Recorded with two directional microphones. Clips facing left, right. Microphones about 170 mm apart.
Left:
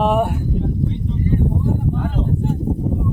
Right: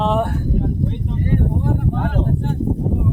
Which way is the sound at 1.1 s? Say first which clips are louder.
Left 1 dB; 70° right (ahead or behind).